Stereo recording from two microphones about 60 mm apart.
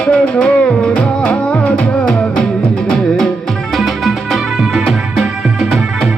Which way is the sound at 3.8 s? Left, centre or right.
Centre.